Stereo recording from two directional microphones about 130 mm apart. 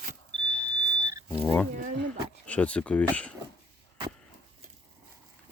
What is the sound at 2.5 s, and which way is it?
Speech, 10° left (ahead or behind).